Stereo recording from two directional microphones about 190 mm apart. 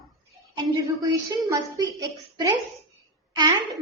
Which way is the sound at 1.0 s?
20° right (ahead or behind).